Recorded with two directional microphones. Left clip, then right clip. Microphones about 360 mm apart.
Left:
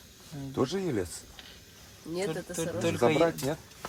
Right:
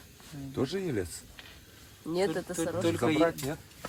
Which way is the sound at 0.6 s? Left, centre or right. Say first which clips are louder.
Left 2 dB; centre.